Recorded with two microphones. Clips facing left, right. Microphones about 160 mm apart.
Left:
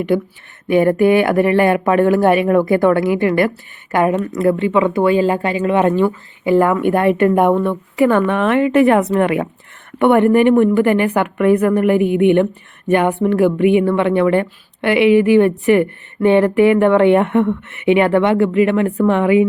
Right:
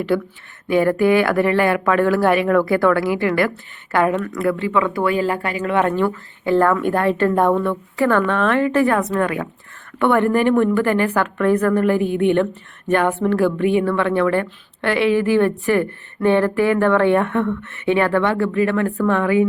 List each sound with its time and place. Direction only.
0.1 s a woman's voice: 20° left (ahead or behind)